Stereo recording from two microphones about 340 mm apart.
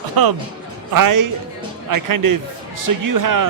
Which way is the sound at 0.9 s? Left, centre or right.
Right.